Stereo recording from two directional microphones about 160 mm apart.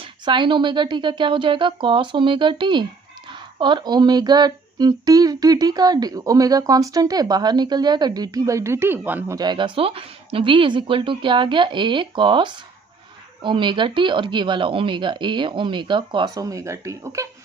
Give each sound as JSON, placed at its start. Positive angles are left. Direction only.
{"t": 0.0, "sound": "speech", "side_deg": -30}
{"t": 9.4, "sound": "speech", "side_deg": -30}